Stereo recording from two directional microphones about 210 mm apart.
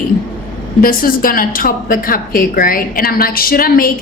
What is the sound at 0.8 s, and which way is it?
A woman's voice, 45° left (ahead or behind).